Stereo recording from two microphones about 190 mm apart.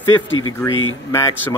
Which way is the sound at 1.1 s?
15° left (ahead or behind).